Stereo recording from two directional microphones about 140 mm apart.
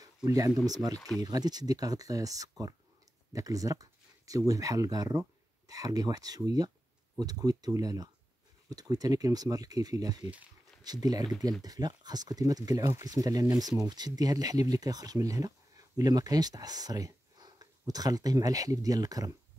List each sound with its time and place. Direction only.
0.0 s a sound: 25° right (ahead or behind)
0.7 s speech: 25° right (ahead or behind)
0.9 s speech: centre (ahead or behind)
1.2 s speech: 25° right (ahead or behind)